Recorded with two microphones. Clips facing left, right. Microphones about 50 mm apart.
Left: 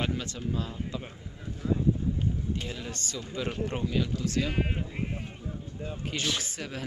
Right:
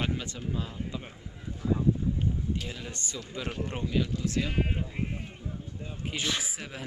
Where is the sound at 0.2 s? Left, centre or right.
Centre.